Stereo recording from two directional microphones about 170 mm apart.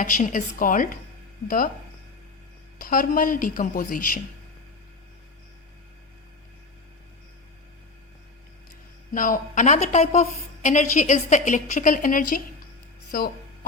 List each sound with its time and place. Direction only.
0.0 s a woman's voice: 50° left (ahead or behind)
2.7 s a woman's voice: 55° left (ahead or behind)
9.1 s a woman's voice: 50° left (ahead or behind)